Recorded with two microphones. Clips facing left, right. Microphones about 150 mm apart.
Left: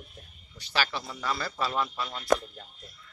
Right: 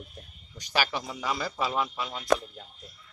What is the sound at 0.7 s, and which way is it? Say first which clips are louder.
A man's voice: right 2 dB; 15° right (ahead or behind).